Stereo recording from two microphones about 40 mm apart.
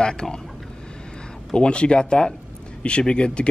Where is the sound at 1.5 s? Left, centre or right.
Left.